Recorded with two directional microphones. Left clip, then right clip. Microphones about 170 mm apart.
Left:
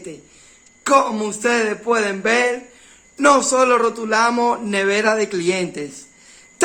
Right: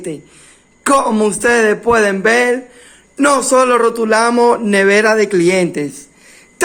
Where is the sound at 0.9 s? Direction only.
35° right (ahead or behind).